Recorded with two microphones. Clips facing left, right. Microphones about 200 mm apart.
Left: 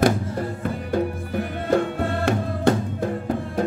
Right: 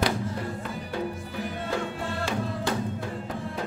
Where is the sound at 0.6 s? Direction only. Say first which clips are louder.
Left 8 dB; 55° left (ahead or behind).